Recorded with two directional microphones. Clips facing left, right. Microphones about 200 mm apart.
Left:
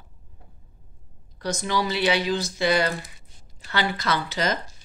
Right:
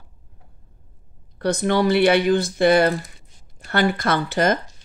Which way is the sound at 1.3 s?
60° right (ahead or behind).